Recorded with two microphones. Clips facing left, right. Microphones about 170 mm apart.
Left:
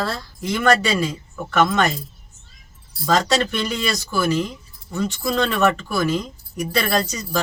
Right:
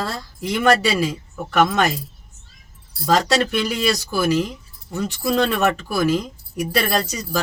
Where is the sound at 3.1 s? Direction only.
10° right (ahead or behind).